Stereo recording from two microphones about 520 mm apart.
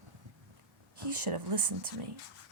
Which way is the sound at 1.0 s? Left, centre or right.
Right.